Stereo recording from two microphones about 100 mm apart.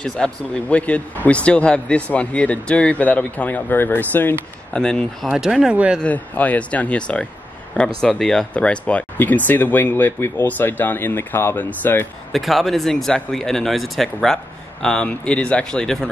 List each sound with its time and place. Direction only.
0.0 s a man's voice: 10° left (ahead or behind)
4.7 s speech: 5° left (ahead or behind)
5.3 s speech: 5° right (ahead or behind)
6.0 s a man's voice: 15° left (ahead or behind)
12.3 s speech: centre (ahead or behind)